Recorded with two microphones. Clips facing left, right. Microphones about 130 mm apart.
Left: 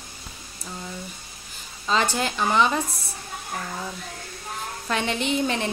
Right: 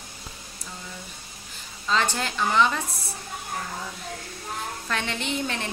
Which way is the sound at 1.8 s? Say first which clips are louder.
Left 2 dB; 15° left (ahead or behind).